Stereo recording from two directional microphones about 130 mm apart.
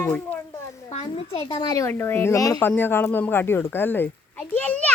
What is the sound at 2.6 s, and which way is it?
Speech, 15° left (ahead or behind).